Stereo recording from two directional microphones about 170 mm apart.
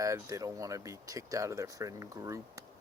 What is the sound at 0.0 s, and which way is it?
Speech, 20° right (ahead or behind).